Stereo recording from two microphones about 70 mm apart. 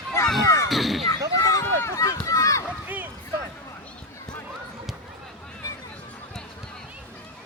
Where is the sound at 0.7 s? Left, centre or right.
Centre.